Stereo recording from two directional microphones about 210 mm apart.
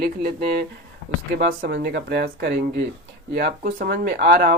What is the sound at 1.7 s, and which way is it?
Speech, 50° right (ahead or behind).